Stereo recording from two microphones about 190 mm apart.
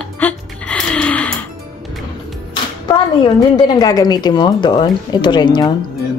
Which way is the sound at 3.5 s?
20° left (ahead or behind).